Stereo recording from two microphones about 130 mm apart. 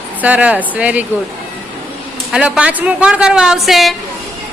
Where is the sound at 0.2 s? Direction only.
10° right (ahead or behind).